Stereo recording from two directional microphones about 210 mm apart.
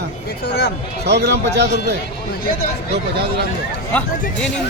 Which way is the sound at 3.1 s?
50° right (ahead or behind).